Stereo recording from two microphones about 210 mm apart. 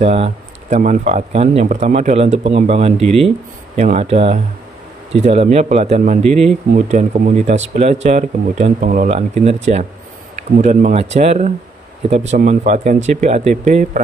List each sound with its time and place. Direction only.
0.0 s speech: 30° right (ahead or behind)